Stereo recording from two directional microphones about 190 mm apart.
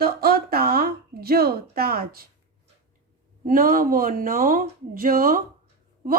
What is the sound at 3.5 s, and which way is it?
Speech, 50° right (ahead or behind).